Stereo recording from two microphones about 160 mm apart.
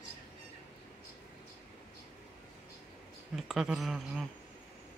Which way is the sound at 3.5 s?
Centre (ahead or behind).